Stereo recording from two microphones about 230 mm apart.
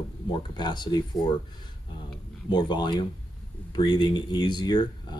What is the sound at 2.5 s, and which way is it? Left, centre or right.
Speech, centre.